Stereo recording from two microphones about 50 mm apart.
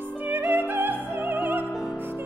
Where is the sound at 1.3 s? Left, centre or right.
Right.